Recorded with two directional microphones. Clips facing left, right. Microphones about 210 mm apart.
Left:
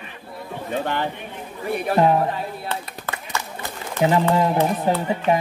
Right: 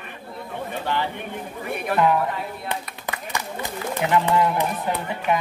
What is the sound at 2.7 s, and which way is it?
Clapping, 15° right (ahead or behind).